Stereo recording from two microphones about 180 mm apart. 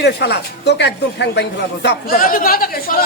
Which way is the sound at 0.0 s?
70° left (ahead or behind).